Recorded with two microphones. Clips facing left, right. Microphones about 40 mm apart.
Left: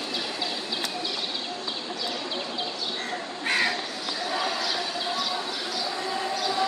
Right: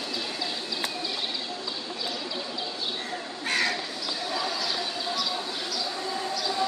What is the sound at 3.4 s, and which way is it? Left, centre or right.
Crow, centre.